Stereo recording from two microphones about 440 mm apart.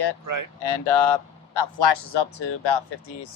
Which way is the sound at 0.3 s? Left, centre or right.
Right.